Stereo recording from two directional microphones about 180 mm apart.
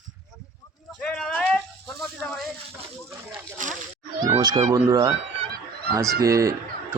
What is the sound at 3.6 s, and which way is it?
Speech, 45° right (ahead or behind).